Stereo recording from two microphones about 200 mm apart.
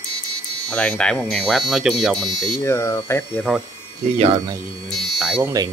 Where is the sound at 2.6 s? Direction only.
15° left (ahead or behind).